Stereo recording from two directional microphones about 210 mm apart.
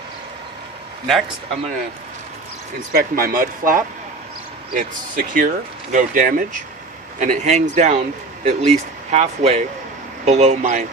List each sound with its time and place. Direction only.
2.9 s speech: 45° right (ahead or behind)